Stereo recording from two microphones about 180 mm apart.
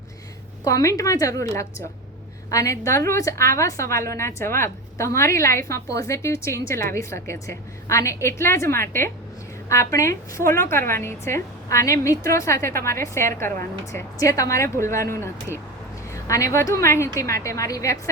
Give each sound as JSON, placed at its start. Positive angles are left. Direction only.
{"t": 0.6, "sound": "a woman's voice", "side_deg": 20}